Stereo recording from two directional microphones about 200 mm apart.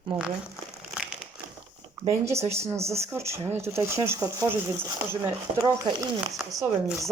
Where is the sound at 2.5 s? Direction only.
15° right (ahead or behind).